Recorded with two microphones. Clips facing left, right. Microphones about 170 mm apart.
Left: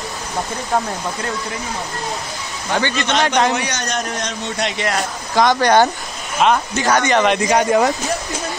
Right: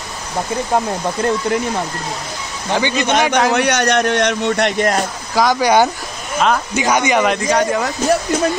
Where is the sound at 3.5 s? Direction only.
65° right (ahead or behind); by 5.0 s 50° right (ahead or behind).